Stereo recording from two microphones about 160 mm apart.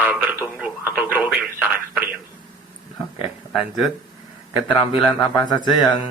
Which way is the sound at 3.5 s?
Centre (ahead or behind).